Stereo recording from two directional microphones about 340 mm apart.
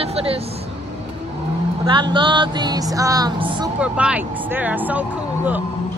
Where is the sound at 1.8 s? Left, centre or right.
Centre.